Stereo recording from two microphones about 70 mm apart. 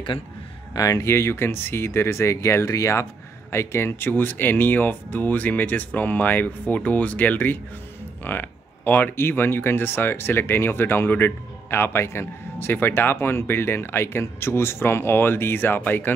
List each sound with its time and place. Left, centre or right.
0.7 s speech: left
3.5 s speech: left